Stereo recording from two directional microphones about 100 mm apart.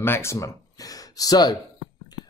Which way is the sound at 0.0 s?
25° left (ahead or behind).